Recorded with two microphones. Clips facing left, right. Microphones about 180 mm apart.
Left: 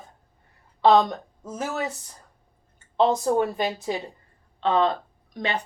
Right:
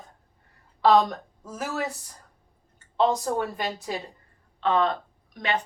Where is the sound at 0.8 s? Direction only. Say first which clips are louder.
Left 2 dB; 20° left (ahead or behind).